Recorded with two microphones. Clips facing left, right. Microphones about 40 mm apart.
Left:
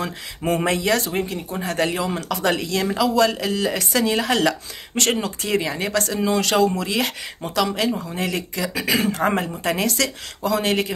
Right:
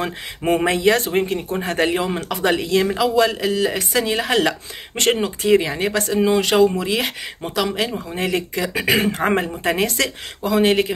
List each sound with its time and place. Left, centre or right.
0.0 s a man's voice: right
5.4 s speech: centre
8.7 s a man's voice: right